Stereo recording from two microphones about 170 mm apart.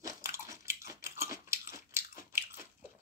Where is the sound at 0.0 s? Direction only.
15° right (ahead or behind).